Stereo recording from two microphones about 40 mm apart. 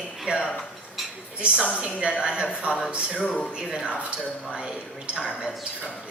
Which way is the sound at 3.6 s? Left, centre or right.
Centre.